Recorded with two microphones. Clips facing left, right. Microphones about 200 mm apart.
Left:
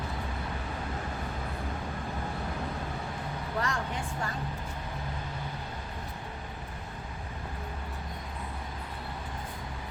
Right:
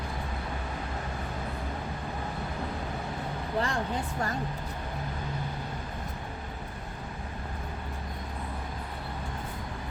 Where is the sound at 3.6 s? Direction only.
30° right (ahead or behind).